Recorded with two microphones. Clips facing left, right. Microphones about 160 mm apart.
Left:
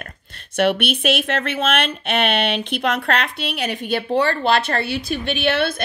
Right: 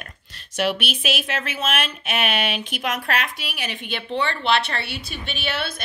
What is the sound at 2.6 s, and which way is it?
Speech, 60° left (ahead or behind).